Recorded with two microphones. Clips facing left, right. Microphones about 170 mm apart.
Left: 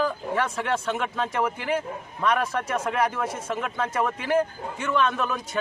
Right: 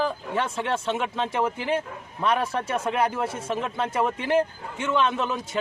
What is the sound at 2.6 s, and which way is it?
A man's voice, 25° right (ahead or behind).